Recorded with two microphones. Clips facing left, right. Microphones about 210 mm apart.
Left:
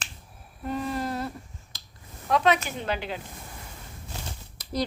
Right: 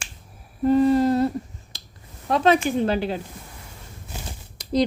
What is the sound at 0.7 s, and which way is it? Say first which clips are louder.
Humming: right 13 dB; 30° right (ahead or behind).